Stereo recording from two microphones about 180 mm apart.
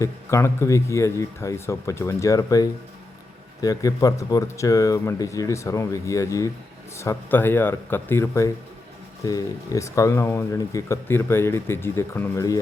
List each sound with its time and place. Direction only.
0.0 s speech: 15° left (ahead or behind)